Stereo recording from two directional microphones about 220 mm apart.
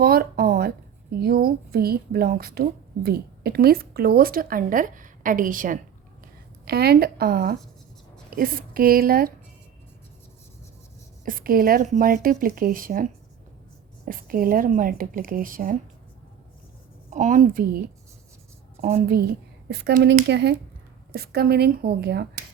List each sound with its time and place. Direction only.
0.0 s a sound: 45° right (ahead or behind)
1.2 s a woman's voice: 45° right (ahead or behind)
11.3 s speech: 40° right (ahead or behind)
17.1 s speech: 35° right (ahead or behind)
18.8 s a woman's voice: 40° right (ahead or behind)